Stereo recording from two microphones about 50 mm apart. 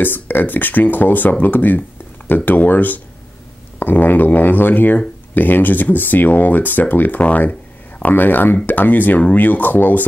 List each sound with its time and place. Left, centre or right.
0.0 s speech: left